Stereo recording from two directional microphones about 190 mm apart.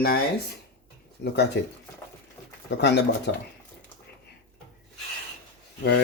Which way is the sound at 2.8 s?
65° left (ahead or behind).